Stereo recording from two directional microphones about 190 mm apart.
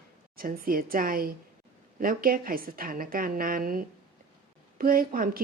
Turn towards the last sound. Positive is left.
turn(degrees=-50)  # may be behind; listen again after turning